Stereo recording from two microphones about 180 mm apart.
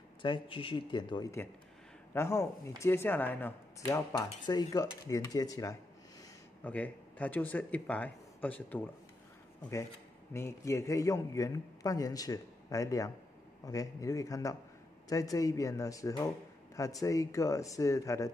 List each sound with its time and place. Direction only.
0.2 s a man's voice: 30° left (ahead or behind)
6.6 s speech: 10° left (ahead or behind)
10.3 s a man's voice: 15° left (ahead or behind)